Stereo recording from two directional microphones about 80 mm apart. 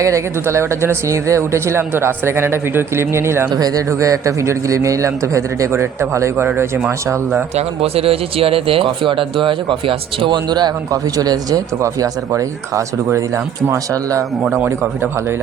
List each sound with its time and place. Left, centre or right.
0.0 s a man's voice: right
3.5 s a man's voice: right
8.8 s speech: right
11.2 s a man's voice: right